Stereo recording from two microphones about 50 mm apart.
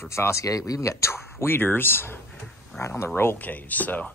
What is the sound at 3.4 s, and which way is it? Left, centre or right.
Speech, left.